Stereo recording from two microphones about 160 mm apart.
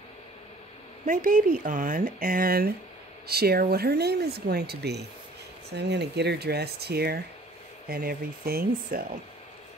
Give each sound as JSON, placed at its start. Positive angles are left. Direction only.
{"t": 1.0, "sound": "speech", "side_deg": -55}
{"t": 7.9, "sound": "speech", "side_deg": -70}